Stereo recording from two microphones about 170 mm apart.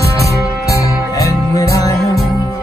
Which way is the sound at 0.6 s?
20° left (ahead or behind).